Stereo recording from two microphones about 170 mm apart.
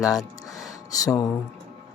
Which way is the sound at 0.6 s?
20° left (ahead or behind).